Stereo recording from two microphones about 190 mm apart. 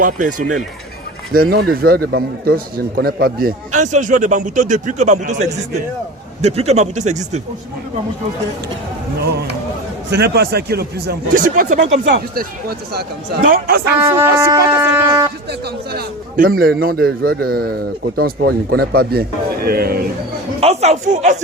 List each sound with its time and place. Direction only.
0.0 s a man's voice: 45° right (ahead or behind)
10.1 s speech: 60° right (ahead or behind); by 11.9 s 40° right (ahead or behind)
12.0 s speech: 55° right (ahead or behind)
14.0 s shofar: 15° right (ahead or behind)
15.9 s a man's voice: 50° right (ahead or behind)
20.6 s a man's voice: 35° right (ahead or behind)